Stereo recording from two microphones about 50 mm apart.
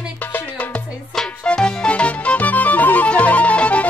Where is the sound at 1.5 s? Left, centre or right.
Centre.